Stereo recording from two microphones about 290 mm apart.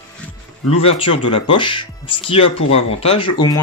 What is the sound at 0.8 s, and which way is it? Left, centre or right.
Speech, centre.